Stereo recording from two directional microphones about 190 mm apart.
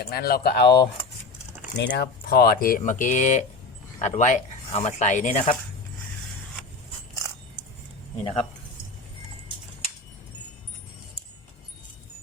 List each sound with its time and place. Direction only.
0.0 s speech: 55° left (ahead or behind)
1.8 s speech: 60° left (ahead or behind); by 5.5 s 40° left (ahead or behind)
8.2 s speech: 30° left (ahead or behind)